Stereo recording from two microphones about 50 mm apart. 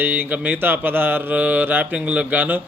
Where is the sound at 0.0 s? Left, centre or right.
Right.